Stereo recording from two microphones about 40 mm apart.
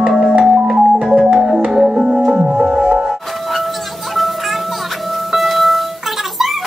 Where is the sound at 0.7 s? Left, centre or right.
Centre.